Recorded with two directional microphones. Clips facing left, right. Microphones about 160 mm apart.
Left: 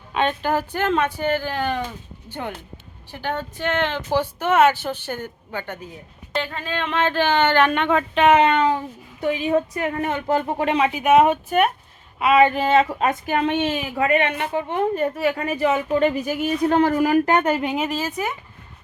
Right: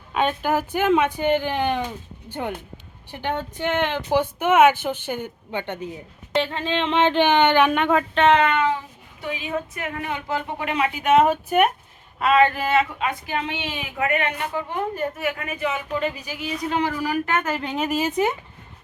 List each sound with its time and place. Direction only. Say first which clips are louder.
0.1 s speech: even; 5° right (ahead or behind)
8.3 s a woman's voice: left 3 dB; 25° left (ahead or behind); by 10.4 s 50° left (ahead or behind)
10.6 s speech: left 4 dB; 30° left (ahead or behind)
11.4 s speech: even; 10° right (ahead or behind)
12.2 s speech: left 2 dB; 15° left (ahead or behind)
12.5 s speech: left 4 dB; 30° left (ahead or behind)
13.0 s a woman's voice: left 5 dB; 50° left (ahead or behind)
14.1 s a woman's voice: left 5 dB; 20° left (ahead or behind)
17.9 s speech: right 4 dB; 20° right (ahead or behind)